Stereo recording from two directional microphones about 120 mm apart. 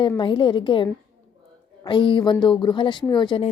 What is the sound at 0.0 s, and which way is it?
Speech, 45° left (ahead or behind).